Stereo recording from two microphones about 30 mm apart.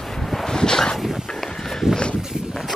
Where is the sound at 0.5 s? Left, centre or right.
Left.